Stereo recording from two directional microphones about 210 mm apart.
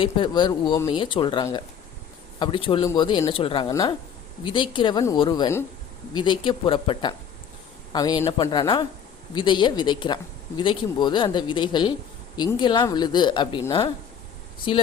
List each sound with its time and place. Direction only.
0.0 s speech: 20° left (ahead or behind)